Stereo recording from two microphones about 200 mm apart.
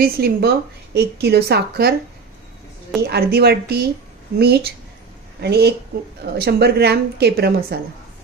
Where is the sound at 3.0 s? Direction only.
55° right (ahead or behind).